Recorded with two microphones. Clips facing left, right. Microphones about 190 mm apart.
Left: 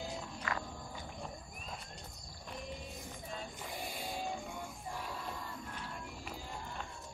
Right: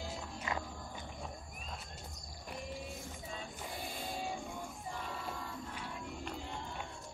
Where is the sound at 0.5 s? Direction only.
20° right (ahead or behind).